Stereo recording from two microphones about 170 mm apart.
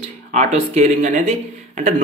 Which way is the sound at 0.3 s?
40° right (ahead or behind).